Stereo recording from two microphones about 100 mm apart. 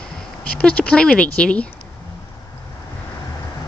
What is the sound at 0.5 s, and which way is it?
Speech, 10° left (ahead or behind).